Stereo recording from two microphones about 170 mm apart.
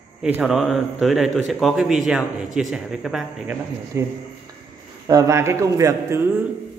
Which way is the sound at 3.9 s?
15° right (ahead or behind).